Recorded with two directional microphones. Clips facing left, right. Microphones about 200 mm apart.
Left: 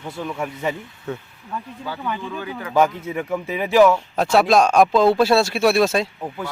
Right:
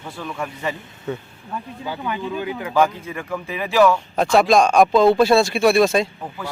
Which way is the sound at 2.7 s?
20° left (ahead or behind).